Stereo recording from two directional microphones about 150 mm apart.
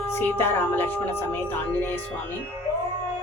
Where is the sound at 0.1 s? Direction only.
15° left (ahead or behind).